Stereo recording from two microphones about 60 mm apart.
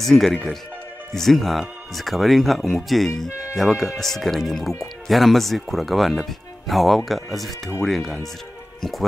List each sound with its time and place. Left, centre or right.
0.0 s speech: centre